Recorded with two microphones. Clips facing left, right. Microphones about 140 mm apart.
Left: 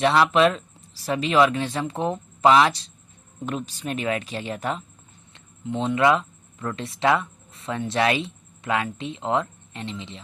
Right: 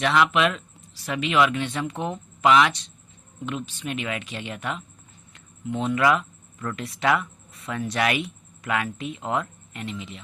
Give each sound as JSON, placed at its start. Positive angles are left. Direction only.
{"t": 0.0, "sound": "speech", "side_deg": 35}